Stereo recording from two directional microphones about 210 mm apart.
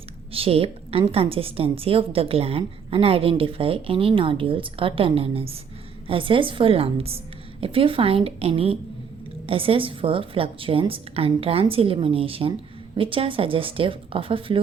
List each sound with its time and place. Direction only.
0.3 s a woman's voice: 25° right (ahead or behind)